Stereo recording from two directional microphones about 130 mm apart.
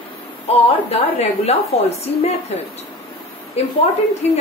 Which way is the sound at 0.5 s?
50° left (ahead or behind).